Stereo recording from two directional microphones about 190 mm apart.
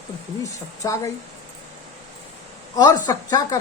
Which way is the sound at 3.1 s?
20° left (ahead or behind).